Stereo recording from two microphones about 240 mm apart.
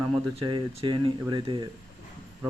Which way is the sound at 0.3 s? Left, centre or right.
Right.